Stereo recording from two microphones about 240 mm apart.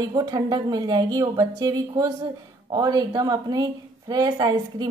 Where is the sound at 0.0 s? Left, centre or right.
Centre.